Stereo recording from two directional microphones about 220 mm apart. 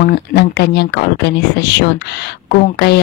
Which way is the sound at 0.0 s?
45° left (ahead or behind).